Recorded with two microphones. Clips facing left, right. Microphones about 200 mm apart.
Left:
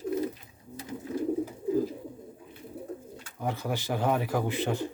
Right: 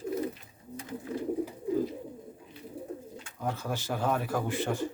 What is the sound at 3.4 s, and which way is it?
Speech, 15° left (ahead or behind).